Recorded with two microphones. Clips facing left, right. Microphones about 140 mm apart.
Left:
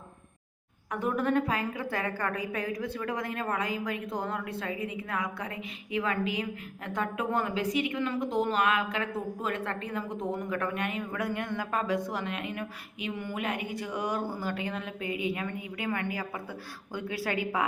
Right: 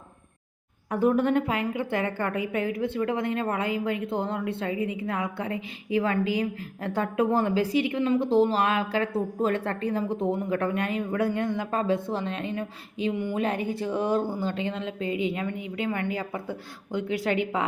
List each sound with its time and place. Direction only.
0.9 s a woman's voice: 30° right (ahead or behind)
13.4 s a woman's voice: 30° right (ahead or behind)